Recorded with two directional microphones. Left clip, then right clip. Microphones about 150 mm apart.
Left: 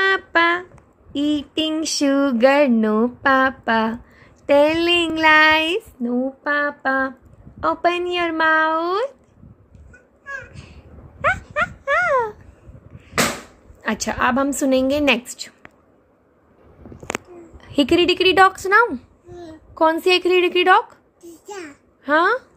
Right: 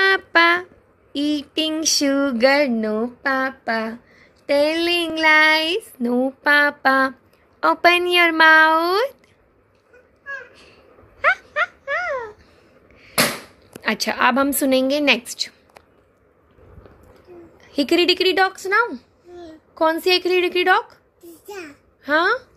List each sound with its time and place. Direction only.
0.0 s a sound: centre (ahead or behind)
1.1 s speech: 10° left (ahead or behind)
2.7 s speech: 20° left (ahead or behind)
6.0 s a woman's voice: 10° right (ahead or behind)
10.2 s a sound: 15° left (ahead or behind)
13.8 s a woman's voice: 5° left (ahead or behind)
17.6 s a woman's voice: 15° left (ahead or behind)
21.5 s babbling: 10° left (ahead or behind)